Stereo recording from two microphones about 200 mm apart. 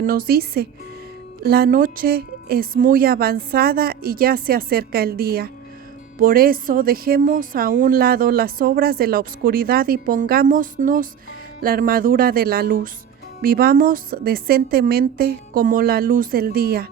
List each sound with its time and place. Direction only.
0.0 s speech: 45° right (ahead or behind)